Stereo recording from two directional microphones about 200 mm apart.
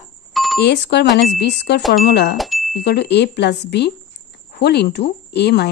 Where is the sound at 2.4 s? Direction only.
Centre (ahead or behind).